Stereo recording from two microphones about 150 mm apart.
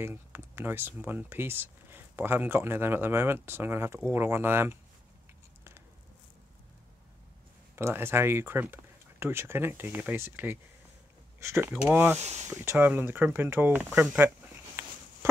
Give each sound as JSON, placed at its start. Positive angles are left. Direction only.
{"t": 0.0, "sound": "speech", "side_deg": -15}
{"t": 7.7, "sound": "speech", "side_deg": -15}
{"t": 12.2, "sound": "speech", "side_deg": -50}
{"t": 12.4, "sound": "speech", "side_deg": -15}